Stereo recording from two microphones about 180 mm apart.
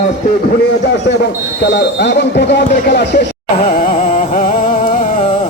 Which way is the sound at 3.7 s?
50° left (ahead or behind).